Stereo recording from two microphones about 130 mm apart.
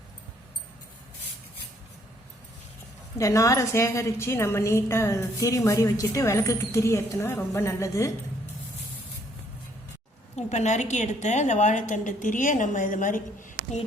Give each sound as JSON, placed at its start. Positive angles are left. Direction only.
{"t": 3.2, "sound": "a woman's voice", "side_deg": 25}
{"t": 10.3, "sound": "a woman's voice", "side_deg": 60}